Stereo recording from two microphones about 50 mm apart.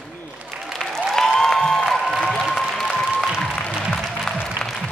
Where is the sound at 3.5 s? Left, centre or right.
Left.